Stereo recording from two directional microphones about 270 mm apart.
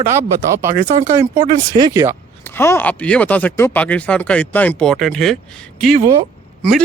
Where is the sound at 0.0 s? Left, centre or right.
Centre.